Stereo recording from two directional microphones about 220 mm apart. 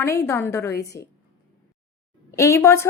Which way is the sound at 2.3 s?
15° left (ahead or behind).